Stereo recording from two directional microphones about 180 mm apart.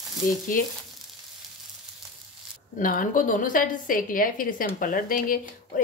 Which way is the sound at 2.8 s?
50° left (ahead or behind).